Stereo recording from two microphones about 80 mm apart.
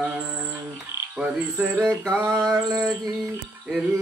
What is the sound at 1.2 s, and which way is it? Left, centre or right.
Frog, centre.